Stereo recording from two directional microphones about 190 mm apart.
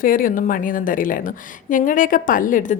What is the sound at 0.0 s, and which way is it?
A woman's voice, 45° left (ahead or behind).